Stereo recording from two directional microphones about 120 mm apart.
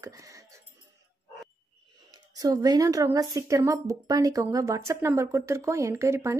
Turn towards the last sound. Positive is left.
turn(degrees=-25)  # may be behind; listen again after turning